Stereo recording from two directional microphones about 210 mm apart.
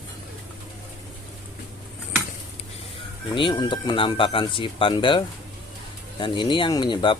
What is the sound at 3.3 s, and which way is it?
Speech, 20° left (ahead or behind).